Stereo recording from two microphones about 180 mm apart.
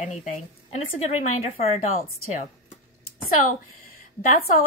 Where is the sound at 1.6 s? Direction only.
35° left (ahead or behind).